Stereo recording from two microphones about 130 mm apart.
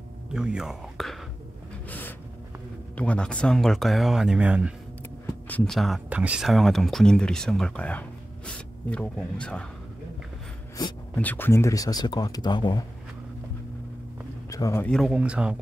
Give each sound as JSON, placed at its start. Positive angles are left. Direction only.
{"t": 0.3, "sound": "speech", "side_deg": -5}
{"t": 1.9, "sound": "a sound", "side_deg": 15}
{"t": 3.0, "sound": "speech", "side_deg": 10}
{"t": 5.2, "sound": "a sound", "side_deg": 10}
{"t": 6.0, "sound": "speech", "side_deg": -10}
{"t": 11.1, "sound": "speech", "side_deg": 15}
{"t": 14.5, "sound": "a man's voice", "side_deg": 25}
{"t": 14.9, "sound": "speech", "side_deg": 0}
{"t": 15.1, "sound": "speech", "side_deg": -10}